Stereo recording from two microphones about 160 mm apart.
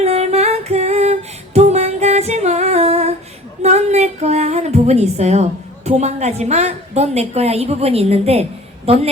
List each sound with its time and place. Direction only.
0.0 s female singing: 40° right (ahead or behind)
3.6 s a woman's voice: 45° right (ahead or behind)